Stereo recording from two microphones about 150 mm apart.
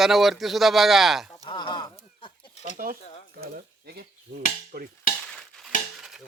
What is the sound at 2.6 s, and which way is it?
Speech, 70° right (ahead or behind).